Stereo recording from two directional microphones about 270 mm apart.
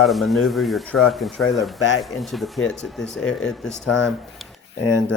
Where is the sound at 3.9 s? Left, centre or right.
Left.